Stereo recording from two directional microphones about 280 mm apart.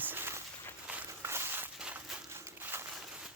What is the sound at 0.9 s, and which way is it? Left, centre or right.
Walk, centre.